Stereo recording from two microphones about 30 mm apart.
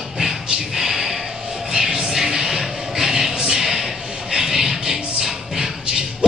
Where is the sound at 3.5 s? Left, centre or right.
Centre.